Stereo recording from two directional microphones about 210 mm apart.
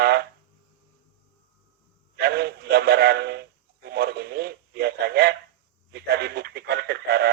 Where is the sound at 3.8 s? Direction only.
50° right (ahead or behind).